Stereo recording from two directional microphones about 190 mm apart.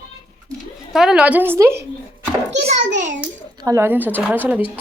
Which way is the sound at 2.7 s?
40° right (ahead or behind).